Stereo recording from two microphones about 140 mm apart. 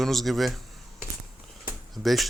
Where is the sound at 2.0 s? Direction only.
Centre (ahead or behind).